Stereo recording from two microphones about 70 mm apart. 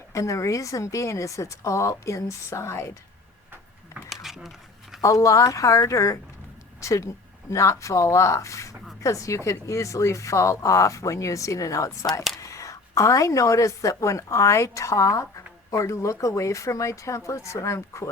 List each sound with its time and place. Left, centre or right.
0.1 s speech: left
4.1 s a sound: centre
4.9 s speech: left